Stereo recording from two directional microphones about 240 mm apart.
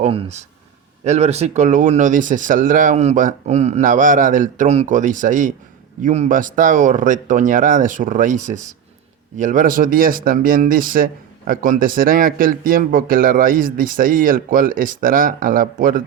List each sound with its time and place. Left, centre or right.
0.0 s speech: right